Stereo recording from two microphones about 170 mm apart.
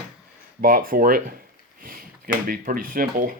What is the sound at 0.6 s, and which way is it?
Speech, 60° right (ahead or behind).